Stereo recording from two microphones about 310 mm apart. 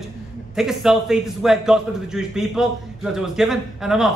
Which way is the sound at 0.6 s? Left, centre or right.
Centre.